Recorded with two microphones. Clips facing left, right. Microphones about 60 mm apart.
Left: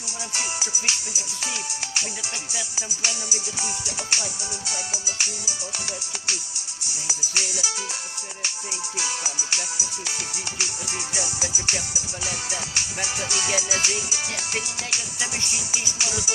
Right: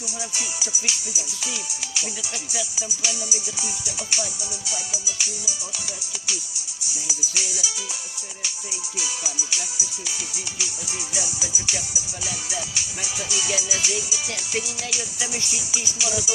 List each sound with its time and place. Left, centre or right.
0.3 s music: left
6.8 s music: left